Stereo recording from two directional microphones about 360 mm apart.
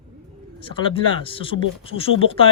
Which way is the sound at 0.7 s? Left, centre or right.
Centre.